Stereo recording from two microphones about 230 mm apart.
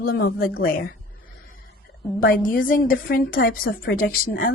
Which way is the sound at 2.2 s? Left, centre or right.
Left.